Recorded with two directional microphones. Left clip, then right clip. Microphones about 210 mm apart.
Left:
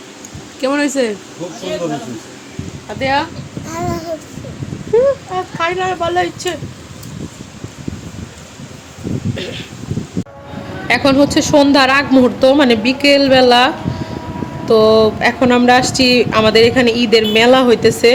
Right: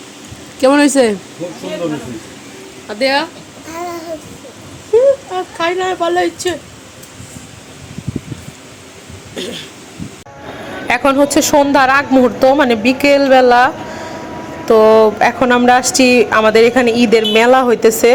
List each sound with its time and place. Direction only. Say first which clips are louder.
0.6 s speech: right 6 dB; 35° right (ahead or behind)
3.0 s speech: right 2 dB; 20° right (ahead or behind)
3.7 s babbling: left 2 dB; 5° left (ahead or behind)
4.9 s a sound: right 2 dB; 15° right (ahead or behind)
5.3 s speech: right 1 dB; 15° right (ahead or behind)
9.3 s speech: right 1 dB; 25° right (ahead or behind)
10.8 s speech: even; 5° right (ahead or behind)